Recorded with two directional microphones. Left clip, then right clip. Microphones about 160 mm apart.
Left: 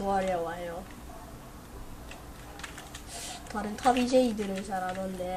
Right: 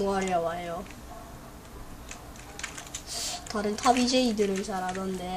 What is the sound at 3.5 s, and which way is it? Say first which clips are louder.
Speech: right 2 dB; 55° right (ahead or behind).